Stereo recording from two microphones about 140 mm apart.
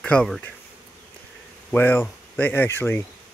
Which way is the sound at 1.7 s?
15° left (ahead or behind).